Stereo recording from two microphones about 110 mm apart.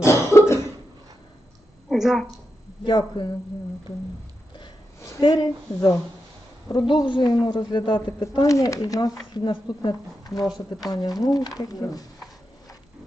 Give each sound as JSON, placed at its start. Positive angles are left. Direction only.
{"t": 0.0, "sound": "cough", "side_deg": 25}
{"t": 1.9, "sound": "a woman's voice", "side_deg": 0}
{"t": 2.8, "sound": "a woman's voice", "side_deg": 45}
{"t": 5.2, "sound": "a woman's voice", "side_deg": 40}
{"t": 8.2, "sound": "speech", "side_deg": 30}
{"t": 10.4, "sound": "speech", "side_deg": 0}
{"t": 10.8, "sound": "speech", "side_deg": 35}